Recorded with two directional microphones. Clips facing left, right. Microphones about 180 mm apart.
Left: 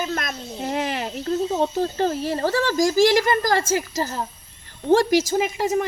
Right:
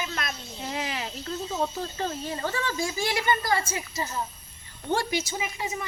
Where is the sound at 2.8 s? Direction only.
90° left.